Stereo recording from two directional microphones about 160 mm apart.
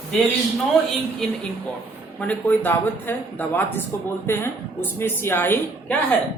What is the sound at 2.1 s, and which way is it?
A woman's voice, 10° left (ahead or behind).